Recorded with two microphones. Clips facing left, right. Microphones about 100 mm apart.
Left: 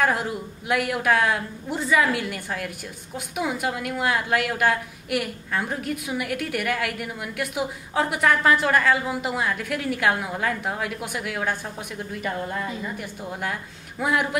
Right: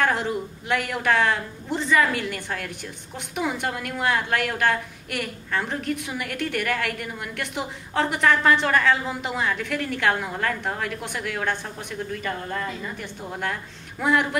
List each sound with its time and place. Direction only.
0.0 s a woman's voice: 5° left (ahead or behind)